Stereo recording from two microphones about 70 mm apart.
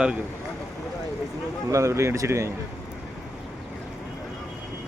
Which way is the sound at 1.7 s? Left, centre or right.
Right.